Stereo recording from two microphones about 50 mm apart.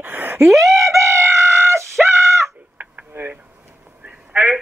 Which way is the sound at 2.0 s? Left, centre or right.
Right.